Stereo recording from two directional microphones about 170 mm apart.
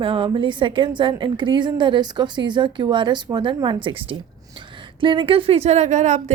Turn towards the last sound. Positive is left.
turn(degrees=-45)  # may be behind; listen again after turning